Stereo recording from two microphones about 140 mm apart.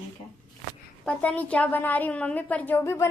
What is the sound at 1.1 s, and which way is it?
A woman's voice, 10° left (ahead or behind).